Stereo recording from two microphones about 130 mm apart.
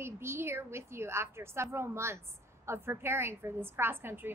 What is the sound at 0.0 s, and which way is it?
A woman's voice, 20° right (ahead or behind).